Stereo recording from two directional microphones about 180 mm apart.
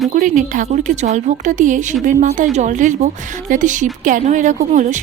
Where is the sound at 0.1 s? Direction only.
45° right (ahead or behind).